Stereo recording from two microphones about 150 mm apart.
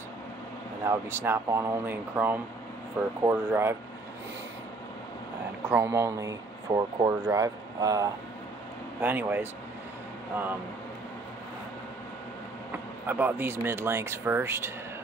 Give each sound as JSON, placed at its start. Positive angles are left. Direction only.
{"t": 0.8, "sound": "speech", "side_deg": -15}
{"t": 5.7, "sound": "speech", "side_deg": -20}
{"t": 9.0, "sound": "speech", "side_deg": -10}
{"t": 13.0, "sound": "speech", "side_deg": -15}